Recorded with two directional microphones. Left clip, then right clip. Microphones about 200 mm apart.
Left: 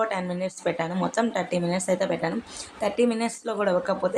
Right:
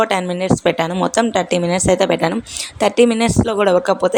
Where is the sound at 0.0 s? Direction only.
45° right (ahead or behind).